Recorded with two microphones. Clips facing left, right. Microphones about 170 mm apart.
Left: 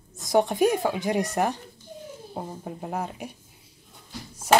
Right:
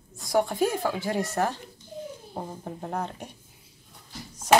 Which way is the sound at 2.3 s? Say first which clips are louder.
Left 4 dB; 5° left (ahead or behind).